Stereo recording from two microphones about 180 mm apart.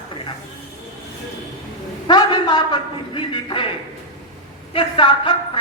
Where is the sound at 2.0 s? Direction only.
25° left (ahead or behind).